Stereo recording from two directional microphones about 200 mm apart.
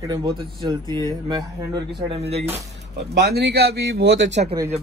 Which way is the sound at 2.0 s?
30° right (ahead or behind).